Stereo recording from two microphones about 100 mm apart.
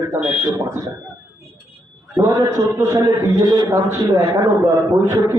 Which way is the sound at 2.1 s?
35° right (ahead or behind).